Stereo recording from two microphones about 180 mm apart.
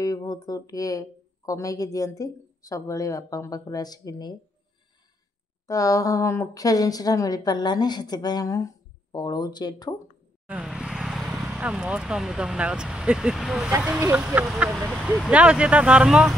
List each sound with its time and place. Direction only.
0.0 s speech: 20° left (ahead or behind)
5.7 s speech: 20° left (ahead or behind)
10.5 s vehicle: 5° right (ahead or behind)
11.4 s speech: 5° right (ahead or behind)
13.9 s speech: 15° right (ahead or behind)
14.2 s speech: 5° right (ahead or behind)